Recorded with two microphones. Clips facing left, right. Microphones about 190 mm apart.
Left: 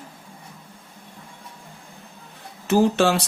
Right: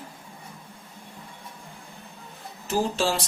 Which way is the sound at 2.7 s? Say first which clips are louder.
Left 7 dB; 65° left (ahead or behind).